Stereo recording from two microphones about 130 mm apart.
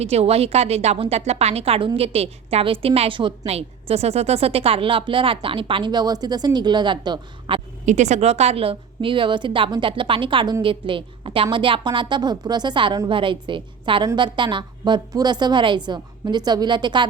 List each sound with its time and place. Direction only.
0.0 s a woman's voice: 55° right (ahead or behind)
7.9 s a woman's voice: 65° right (ahead or behind); by 17.1 s 35° right (ahead or behind)